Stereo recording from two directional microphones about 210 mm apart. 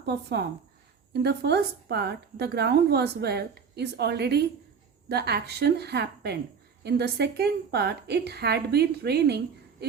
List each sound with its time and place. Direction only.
0.0 s a woman's voice: 55° right (ahead or behind)